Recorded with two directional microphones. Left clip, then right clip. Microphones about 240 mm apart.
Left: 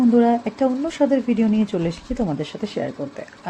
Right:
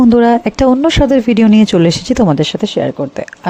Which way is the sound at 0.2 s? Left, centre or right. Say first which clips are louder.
Right 8 dB; right.